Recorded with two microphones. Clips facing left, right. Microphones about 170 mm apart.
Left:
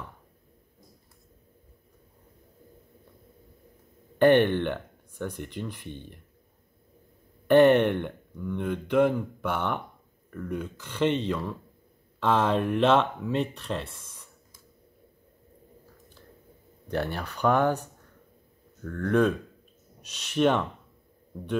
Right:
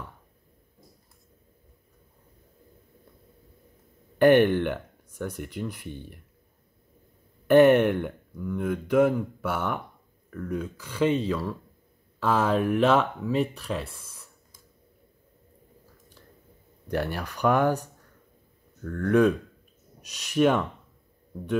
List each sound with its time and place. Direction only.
4.2 s speech: 10° right (ahead or behind)
7.4 s speech: 10° right (ahead or behind)
10.8 s speech: 5° right (ahead or behind)
16.8 s speech: 10° right (ahead or behind)
18.9 s speech: 5° right (ahead or behind)